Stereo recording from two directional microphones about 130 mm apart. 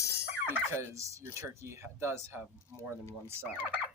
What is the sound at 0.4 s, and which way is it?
Turkey, 15° right (ahead or behind).